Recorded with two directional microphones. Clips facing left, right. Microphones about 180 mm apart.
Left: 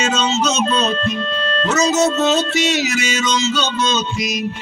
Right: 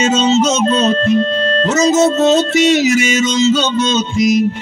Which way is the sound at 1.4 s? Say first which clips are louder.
Right 5 dB; 30° right (ahead or behind).